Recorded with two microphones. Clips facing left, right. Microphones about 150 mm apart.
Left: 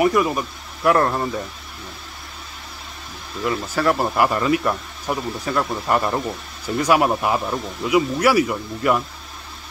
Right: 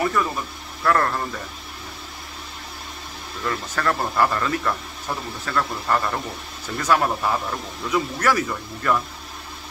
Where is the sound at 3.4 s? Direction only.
10° left (ahead or behind).